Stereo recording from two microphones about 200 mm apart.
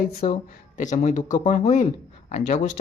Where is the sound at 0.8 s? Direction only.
35° left (ahead or behind).